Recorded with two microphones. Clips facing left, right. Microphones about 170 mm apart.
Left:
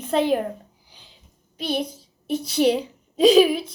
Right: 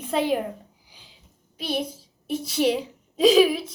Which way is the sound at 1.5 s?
5° right (ahead or behind).